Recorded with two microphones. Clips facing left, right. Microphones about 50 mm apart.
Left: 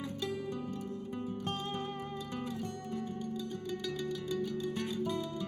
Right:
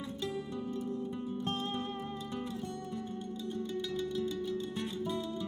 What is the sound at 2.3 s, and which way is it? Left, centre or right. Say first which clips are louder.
Music: left 1 dB; left.